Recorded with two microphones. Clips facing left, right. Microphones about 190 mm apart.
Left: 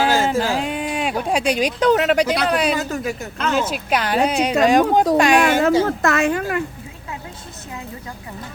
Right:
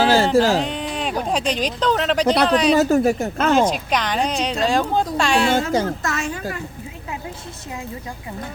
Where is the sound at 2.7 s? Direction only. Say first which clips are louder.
Right 8 dB; 40° right (ahead or behind).